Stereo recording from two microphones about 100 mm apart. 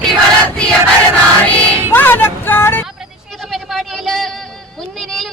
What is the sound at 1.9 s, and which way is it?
Vehicle, 20° left (ahead or behind).